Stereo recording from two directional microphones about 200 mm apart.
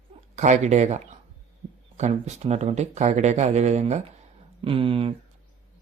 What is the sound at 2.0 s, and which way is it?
Speech, 35° right (ahead or behind).